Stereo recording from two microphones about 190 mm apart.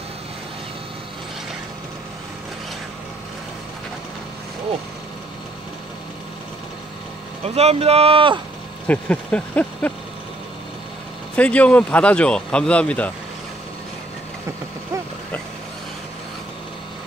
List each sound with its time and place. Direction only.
7.4 s speech: 35° right (ahead or behind)
8.8 s speech: 10° left (ahead or behind)
11.3 s speech: 5° left (ahead or behind)